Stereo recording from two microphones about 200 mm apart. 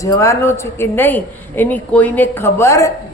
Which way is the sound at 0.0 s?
15° left (ahead or behind).